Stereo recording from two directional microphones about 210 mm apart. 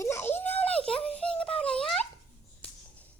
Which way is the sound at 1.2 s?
5° left (ahead or behind).